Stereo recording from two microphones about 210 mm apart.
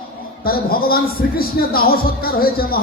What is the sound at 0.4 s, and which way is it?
A man's voice, 45° left (ahead or behind).